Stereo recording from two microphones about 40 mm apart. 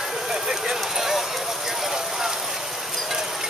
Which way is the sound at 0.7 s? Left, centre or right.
Centre.